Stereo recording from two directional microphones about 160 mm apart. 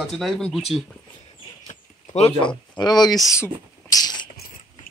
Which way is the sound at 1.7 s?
45° left (ahead or behind).